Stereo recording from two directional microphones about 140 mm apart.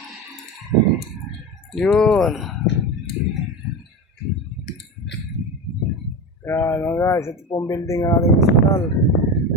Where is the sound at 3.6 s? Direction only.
Centre (ahead or behind).